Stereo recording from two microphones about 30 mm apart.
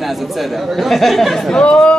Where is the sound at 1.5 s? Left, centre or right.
Left.